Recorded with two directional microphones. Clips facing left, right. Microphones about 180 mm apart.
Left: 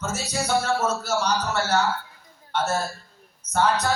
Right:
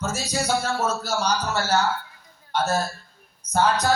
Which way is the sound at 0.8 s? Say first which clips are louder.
Even; 35° right (ahead or behind).